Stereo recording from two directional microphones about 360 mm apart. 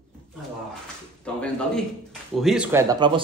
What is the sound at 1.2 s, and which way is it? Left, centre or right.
Speech, centre.